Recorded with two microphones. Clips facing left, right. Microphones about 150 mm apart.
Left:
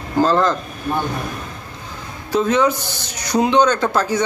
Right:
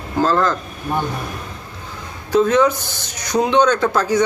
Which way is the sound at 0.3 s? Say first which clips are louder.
Even; 20° left (ahead or behind).